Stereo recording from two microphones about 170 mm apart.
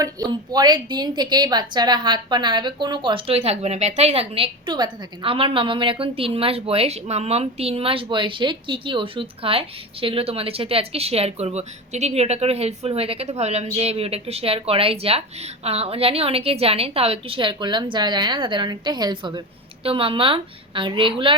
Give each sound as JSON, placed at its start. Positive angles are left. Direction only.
{"t": 0.0, "sound": "a woman's voice", "side_deg": -20}